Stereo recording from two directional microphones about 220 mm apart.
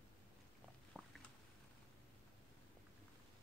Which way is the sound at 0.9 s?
5° right (ahead or behind).